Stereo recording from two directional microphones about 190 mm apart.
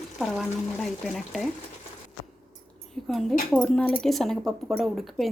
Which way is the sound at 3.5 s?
5° left (ahead or behind).